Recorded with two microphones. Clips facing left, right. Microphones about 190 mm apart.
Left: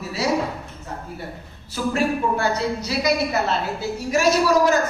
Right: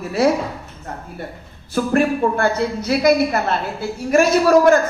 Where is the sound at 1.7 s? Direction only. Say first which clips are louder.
Right 5 dB; 55° right (ahead or behind).